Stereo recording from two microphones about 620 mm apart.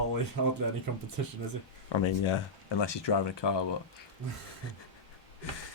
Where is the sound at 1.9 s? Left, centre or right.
Left.